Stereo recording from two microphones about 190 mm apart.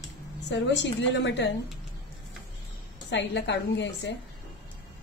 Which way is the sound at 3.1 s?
70° left (ahead or behind).